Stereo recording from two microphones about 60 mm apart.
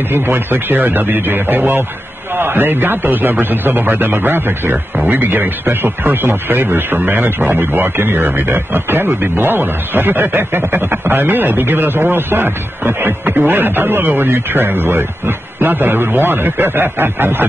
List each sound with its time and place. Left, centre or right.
0.1 s a man's voice: right